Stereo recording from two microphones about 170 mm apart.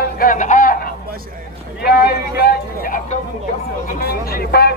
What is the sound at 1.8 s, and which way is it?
Vehicle, 70° left (ahead or behind).